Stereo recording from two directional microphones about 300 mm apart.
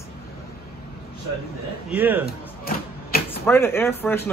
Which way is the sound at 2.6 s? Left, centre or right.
Left.